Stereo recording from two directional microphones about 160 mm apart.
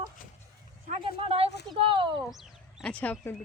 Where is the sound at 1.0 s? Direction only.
35° right (ahead or behind).